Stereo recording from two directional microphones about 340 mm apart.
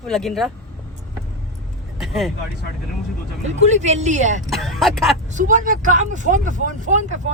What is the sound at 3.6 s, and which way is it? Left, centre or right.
Speech, centre.